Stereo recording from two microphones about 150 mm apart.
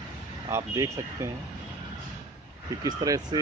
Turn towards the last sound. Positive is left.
turn(degrees=-25)  # may be behind; listen again after turning